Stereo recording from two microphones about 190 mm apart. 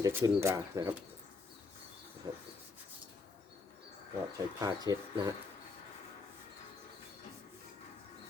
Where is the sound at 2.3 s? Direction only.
20° right (ahead or behind).